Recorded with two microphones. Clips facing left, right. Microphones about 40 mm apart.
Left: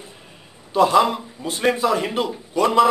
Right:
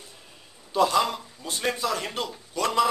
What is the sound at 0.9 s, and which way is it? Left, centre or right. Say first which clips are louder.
A man's voice: left 7 dB; centre.